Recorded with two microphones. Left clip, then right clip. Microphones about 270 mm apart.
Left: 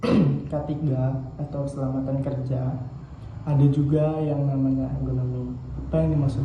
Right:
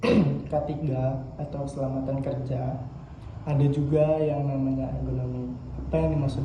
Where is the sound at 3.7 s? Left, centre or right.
Centre.